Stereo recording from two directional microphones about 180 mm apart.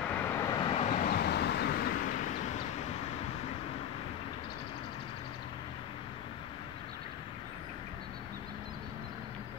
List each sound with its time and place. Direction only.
0.1 s vehicle: 15° left (ahead or behind)
0.6 s vehicle: 30° left (ahead or behind)
1.1 s vehicle: 65° left (ahead or behind)